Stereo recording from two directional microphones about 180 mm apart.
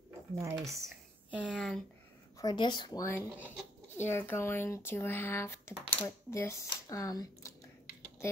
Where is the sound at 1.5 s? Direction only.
5° left (ahead or behind).